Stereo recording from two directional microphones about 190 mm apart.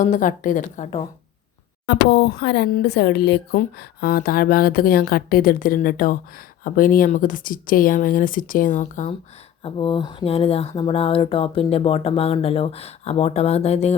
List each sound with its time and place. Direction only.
0.0 s speech: 45° left (ahead or behind)
1.9 s speech: 60° left (ahead or behind); by 9.0 s 40° left (ahead or behind)
9.6 s speech: 25° left (ahead or behind)